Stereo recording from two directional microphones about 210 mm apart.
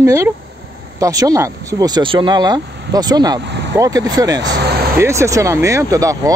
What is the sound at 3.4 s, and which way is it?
Speech, 55° right (ahead or behind).